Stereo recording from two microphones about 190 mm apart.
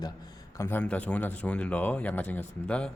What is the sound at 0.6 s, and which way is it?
Speech, 10° left (ahead or behind).